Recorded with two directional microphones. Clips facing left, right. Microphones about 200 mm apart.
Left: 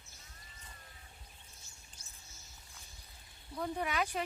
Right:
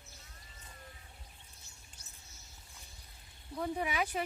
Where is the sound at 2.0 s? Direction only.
65° right (ahead or behind).